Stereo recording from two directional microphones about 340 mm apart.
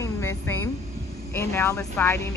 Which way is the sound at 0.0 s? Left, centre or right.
Centre.